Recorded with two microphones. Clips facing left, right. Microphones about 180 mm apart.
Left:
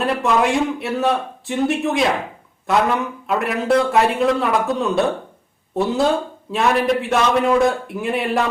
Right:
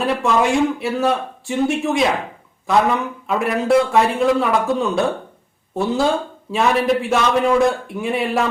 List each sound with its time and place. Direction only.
0.0 s speech: centre (ahead or behind)